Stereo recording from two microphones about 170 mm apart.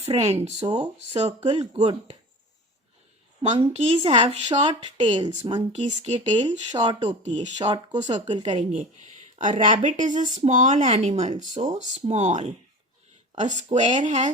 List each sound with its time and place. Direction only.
0.0 s speech: 35° right (ahead or behind)
3.5 s speech: 35° right (ahead or behind)
5.7 s speech: 40° right (ahead or behind)
6.7 s speech: 25° right (ahead or behind)
8.4 s speech: 45° right (ahead or behind)